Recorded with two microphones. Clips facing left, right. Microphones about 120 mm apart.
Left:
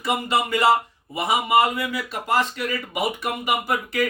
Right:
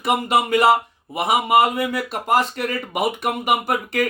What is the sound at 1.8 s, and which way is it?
Speech, 55° right (ahead or behind).